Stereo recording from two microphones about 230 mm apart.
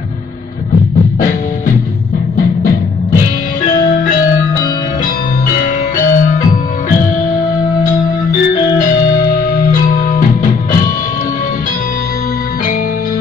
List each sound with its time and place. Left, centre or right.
6.1 s music: left
9.7 s music: left